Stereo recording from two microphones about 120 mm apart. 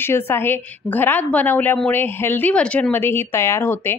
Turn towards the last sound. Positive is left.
turn(degrees=20)  # may be behind; listen again after turning